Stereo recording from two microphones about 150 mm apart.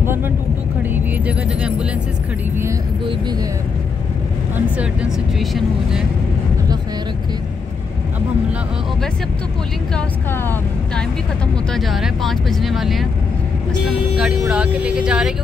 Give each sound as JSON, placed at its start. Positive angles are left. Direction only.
{"t": 0.0, "sound": "vehicle", "side_deg": -15}
{"t": 4.6, "sound": "speech", "side_deg": -5}
{"t": 9.9, "sound": "speech", "side_deg": 15}
{"t": 11.7, "sound": "speech", "side_deg": 0}
{"t": 14.1, "sound": "speech", "side_deg": -5}